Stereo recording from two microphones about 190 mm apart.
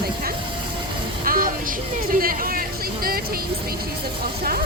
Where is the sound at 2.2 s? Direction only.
50° right (ahead or behind).